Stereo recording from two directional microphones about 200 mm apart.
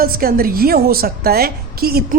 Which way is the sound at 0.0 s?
45° right (ahead or behind).